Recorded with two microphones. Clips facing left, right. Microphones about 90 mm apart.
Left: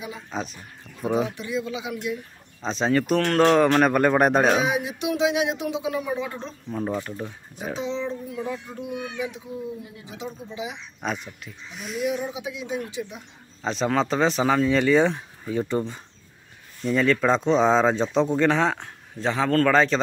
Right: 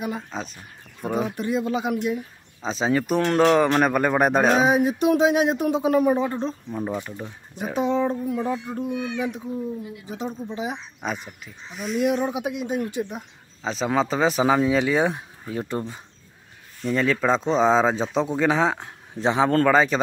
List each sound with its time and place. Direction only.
0.3 s speech: centre (ahead or behind)
1.3 s speech: 45° right (ahead or behind)
2.6 s speech: 5° right (ahead or behind)
4.6 s speech: 40° right (ahead or behind)
6.7 s speech: 10° right (ahead or behind)
7.7 s speech: 50° right (ahead or behind)
11.0 s speech: 5° right (ahead or behind)
12.3 s speech: 55° right (ahead or behind)
13.6 s speech: centre (ahead or behind)
19.1 s speech: 20° right (ahead or behind)